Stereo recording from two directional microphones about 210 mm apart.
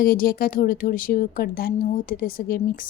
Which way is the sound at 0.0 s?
45° left (ahead or behind).